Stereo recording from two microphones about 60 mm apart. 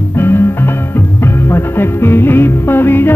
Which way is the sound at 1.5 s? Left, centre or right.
Left.